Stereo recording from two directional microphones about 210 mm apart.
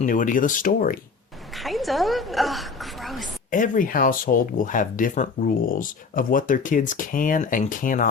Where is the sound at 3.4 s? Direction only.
40° left (ahead or behind).